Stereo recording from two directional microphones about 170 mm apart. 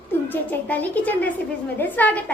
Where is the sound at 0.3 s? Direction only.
10° left (ahead or behind).